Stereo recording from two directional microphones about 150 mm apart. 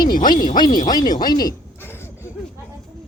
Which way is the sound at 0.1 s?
65° left (ahead or behind).